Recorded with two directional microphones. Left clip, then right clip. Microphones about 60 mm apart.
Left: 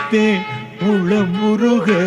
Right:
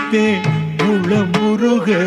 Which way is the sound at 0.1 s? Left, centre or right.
Left.